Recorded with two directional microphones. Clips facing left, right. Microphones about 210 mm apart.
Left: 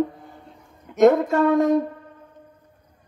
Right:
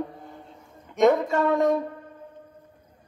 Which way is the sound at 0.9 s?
Centre (ahead or behind).